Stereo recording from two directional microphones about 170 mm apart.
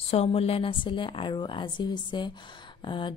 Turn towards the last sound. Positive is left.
turn(degrees=30)  # may be behind; listen again after turning